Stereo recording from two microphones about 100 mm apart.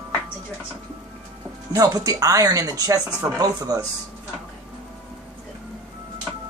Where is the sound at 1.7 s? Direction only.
35° right (ahead or behind).